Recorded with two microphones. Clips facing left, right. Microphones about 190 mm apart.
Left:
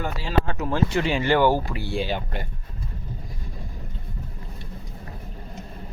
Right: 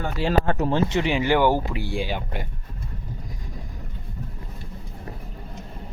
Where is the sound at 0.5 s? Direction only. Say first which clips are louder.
Right 3 dB; 30° right (ahead or behind).